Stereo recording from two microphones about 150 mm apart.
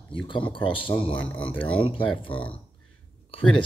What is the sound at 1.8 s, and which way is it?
Speech, 35° left (ahead or behind).